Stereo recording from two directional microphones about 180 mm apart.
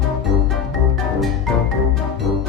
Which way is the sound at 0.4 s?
Centre (ahead or behind).